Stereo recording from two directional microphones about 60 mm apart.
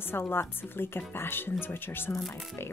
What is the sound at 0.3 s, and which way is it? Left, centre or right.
Speech, left.